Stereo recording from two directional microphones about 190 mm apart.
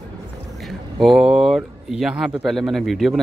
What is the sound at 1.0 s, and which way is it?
Speech, centre (ahead or behind).